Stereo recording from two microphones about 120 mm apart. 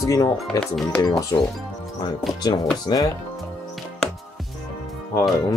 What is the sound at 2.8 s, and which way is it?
Speech, 35° left (ahead or behind).